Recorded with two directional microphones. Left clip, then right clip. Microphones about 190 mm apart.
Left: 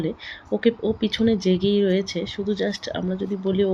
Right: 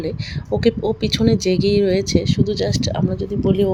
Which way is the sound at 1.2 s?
40° right (ahead or behind).